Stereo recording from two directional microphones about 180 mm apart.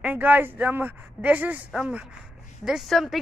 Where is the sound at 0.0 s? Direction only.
10° right (ahead or behind).